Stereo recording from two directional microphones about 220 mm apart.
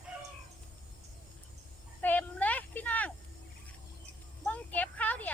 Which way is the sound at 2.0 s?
10° left (ahead or behind).